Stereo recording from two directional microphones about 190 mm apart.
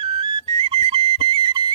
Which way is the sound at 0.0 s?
25° right (ahead or behind).